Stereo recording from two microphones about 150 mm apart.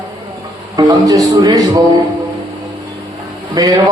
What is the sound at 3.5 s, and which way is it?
Speech, 25° right (ahead or behind).